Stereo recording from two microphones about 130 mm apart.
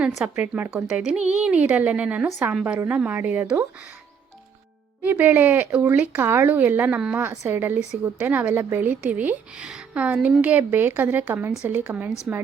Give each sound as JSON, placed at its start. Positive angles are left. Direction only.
{"t": 0.4, "sound": "speech", "side_deg": -15}
{"t": 5.0, "sound": "speech", "side_deg": -15}